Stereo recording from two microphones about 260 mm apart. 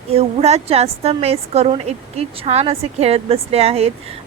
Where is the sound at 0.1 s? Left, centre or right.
Right.